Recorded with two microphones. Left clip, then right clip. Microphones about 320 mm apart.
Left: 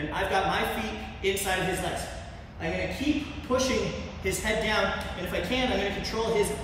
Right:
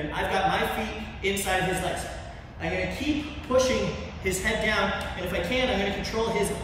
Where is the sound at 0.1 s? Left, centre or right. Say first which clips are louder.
Right 1 dB; centre.